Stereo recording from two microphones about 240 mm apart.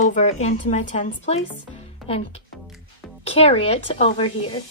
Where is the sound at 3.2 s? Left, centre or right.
Left.